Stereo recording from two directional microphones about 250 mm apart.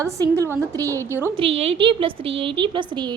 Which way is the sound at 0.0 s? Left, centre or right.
Centre.